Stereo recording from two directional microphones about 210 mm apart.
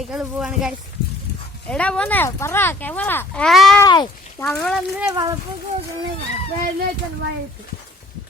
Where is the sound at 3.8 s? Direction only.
15° left (ahead or behind).